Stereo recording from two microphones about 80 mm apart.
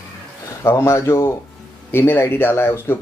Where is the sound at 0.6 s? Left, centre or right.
Left.